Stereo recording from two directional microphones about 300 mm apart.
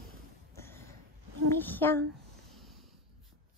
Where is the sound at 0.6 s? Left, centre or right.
Centre.